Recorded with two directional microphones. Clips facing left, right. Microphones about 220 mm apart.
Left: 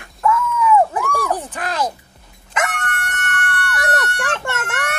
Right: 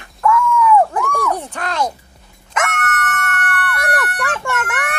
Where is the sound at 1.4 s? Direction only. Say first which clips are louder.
Right 1 dB; 5° left (ahead or behind).